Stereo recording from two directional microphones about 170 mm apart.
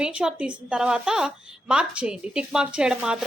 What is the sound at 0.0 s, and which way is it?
A woman's voice, 5° right (ahead or behind).